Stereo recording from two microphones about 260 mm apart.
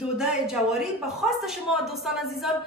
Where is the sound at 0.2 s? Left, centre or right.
Centre.